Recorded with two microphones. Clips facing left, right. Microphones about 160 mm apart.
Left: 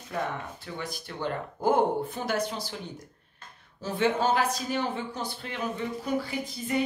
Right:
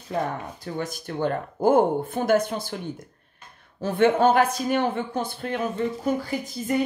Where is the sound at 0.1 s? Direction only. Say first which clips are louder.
Right 5 dB; 40° right (ahead or behind).